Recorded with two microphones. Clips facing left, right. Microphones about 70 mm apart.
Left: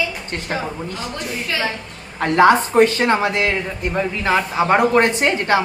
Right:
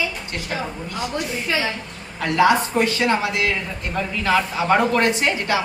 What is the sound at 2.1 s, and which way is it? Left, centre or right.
A woman's voice, left.